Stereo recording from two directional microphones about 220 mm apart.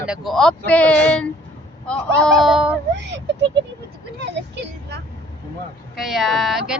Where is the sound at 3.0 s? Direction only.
55° right (ahead or behind).